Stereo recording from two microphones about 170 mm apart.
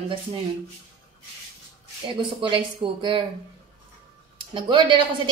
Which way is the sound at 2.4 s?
30° right (ahead or behind).